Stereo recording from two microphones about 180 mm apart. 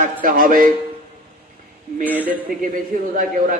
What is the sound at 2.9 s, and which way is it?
Speech, 50° right (ahead or behind).